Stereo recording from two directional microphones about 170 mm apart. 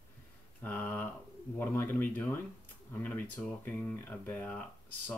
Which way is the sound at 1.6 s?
10° left (ahead or behind).